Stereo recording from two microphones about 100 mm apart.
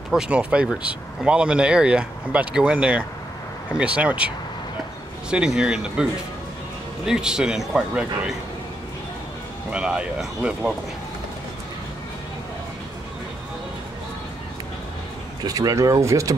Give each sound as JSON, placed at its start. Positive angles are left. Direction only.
{"t": 0.1, "sound": "speech", "side_deg": -10}
{"t": 5.3, "sound": "speech", "side_deg": -10}
{"t": 7.1, "sound": "speech", "side_deg": -5}
{"t": 9.7, "sound": "speech", "side_deg": -10}
{"t": 15.4, "sound": "speech", "side_deg": -35}